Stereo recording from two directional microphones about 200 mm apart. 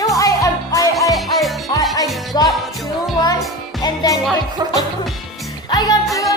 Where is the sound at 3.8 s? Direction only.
20° left (ahead or behind).